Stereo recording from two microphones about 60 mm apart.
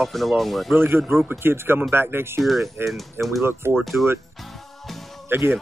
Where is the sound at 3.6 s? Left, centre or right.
Right.